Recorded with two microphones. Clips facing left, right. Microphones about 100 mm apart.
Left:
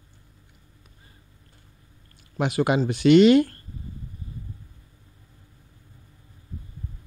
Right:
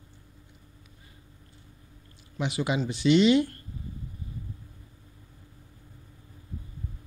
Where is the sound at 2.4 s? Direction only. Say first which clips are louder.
Left 6 dB; 55° left (ahead or behind).